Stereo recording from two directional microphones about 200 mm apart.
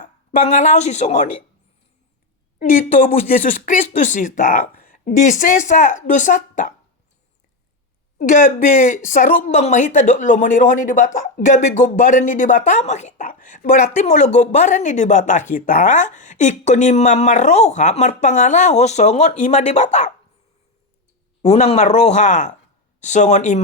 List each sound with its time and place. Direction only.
0.0 s a woman's voice: 40° left (ahead or behind)
2.6 s speech: 35° left (ahead or behind)
8.2 s speech: 40° left (ahead or behind)
21.4 s speech: 35° left (ahead or behind)